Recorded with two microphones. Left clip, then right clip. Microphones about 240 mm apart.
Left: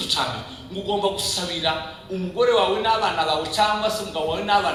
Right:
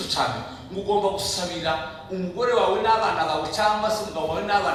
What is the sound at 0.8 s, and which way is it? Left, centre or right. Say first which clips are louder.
Speech: right 1 dB; centre.